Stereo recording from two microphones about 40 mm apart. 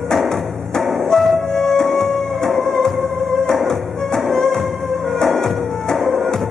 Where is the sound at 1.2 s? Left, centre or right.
Centre.